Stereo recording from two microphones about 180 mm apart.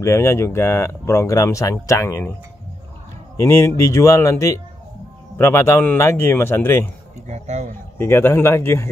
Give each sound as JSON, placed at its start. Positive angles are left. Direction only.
{"t": 0.0, "sound": "speech", "side_deg": 15}
{"t": 3.3, "sound": "speech", "side_deg": 15}
{"t": 7.2, "sound": "speech", "side_deg": -40}
{"t": 8.0, "sound": "speech", "side_deg": 15}